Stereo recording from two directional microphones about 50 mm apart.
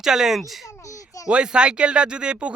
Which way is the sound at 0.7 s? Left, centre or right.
Left.